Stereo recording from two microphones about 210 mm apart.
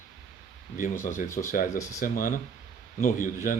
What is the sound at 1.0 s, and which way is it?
Speech, 40° left (ahead or behind).